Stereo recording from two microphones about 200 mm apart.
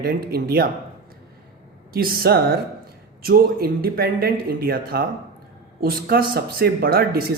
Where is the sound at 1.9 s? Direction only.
45° right (ahead or behind).